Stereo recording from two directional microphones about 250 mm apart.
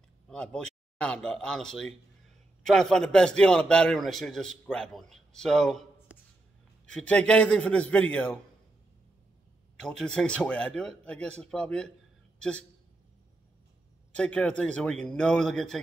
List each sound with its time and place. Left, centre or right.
0.3 s speech: centre
9.8 s a man's voice: centre
14.1 s speech: centre